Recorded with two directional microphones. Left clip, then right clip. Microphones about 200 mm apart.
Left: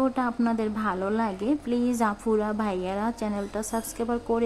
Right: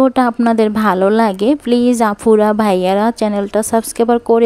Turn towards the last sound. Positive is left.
turn(degrees=-45)  # may be behind; listen again after turning